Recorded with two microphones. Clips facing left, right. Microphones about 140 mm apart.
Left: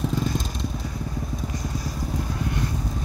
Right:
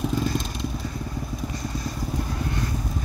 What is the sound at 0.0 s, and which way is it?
Vehicle, 5° right (ahead or behind).